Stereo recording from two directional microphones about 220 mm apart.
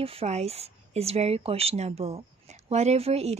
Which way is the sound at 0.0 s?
25° right (ahead or behind).